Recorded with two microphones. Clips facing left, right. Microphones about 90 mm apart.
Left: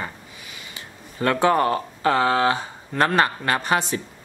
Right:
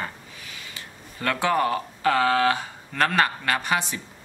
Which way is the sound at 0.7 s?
25° left (ahead or behind).